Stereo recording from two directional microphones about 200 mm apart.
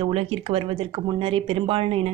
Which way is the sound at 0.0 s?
30° right (ahead or behind).